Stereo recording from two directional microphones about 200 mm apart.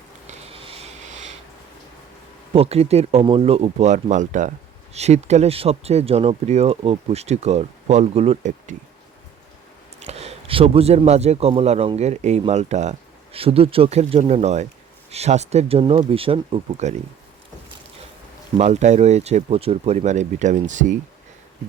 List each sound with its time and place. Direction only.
0.3 s a sound: 30° right (ahead or behind)
2.5 s speech: 30° right (ahead or behind)
10.0 s speech: 30° right (ahead or behind)
18.5 s speech: 35° right (ahead or behind)